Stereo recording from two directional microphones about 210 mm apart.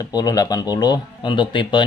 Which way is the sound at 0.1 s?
20° left (ahead or behind).